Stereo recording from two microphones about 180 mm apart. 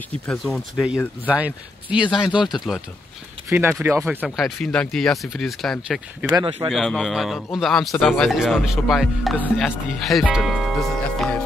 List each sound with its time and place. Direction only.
0.3 s speech: centre (ahead or behind)
3.4 s speech: 15° right (ahead or behind)
4.6 s speech: 5° left (ahead or behind)
6.2 s speech: 25° right (ahead or behind)
6.7 s speech: centre (ahead or behind)